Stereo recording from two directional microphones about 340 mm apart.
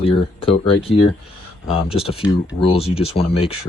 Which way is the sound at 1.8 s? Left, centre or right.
Centre.